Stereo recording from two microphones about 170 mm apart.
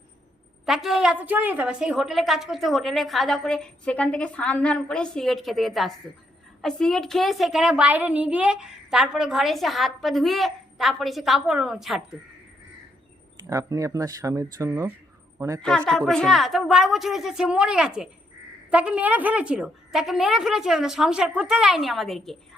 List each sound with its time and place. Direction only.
0.6 s a woman's voice: centre (ahead or behind)
13.5 s speech: 20° right (ahead or behind)
15.9 s a woman's voice: 5° left (ahead or behind)